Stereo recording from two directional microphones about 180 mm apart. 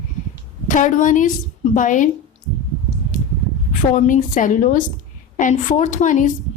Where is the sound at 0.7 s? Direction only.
45° left (ahead or behind).